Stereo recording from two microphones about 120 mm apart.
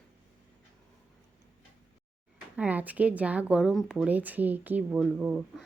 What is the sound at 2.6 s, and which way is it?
Speech, 15° right (ahead or behind).